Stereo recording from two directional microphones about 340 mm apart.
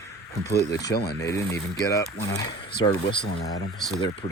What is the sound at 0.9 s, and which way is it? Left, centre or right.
Speech, left.